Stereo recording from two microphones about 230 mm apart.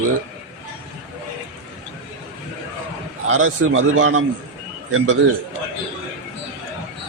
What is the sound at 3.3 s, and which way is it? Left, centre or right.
A man's voice, right.